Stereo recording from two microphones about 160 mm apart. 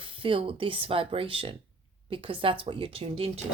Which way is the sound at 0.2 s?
35° right (ahead or behind).